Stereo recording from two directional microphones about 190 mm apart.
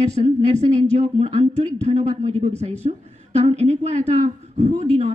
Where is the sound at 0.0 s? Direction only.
35° right (ahead or behind).